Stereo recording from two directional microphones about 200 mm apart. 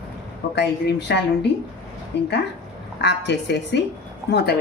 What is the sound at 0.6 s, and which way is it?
A woman's voice, 60° left (ahead or behind).